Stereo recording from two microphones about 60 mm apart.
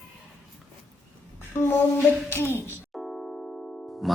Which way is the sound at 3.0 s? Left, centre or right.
Centre.